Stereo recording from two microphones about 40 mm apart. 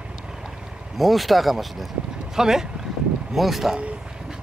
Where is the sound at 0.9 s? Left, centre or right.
Centre.